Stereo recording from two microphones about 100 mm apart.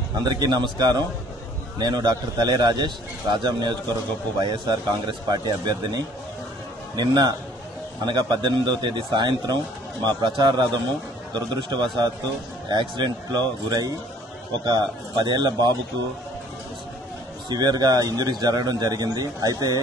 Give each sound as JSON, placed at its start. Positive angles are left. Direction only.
{"t": 0.2, "sound": "a man's voice", "side_deg": -45}
{"t": 17.5, "sound": "a man's voice", "side_deg": -45}